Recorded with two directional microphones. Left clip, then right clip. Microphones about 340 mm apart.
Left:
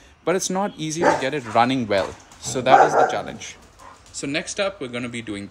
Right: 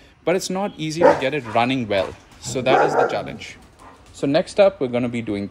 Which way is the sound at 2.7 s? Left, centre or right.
Left.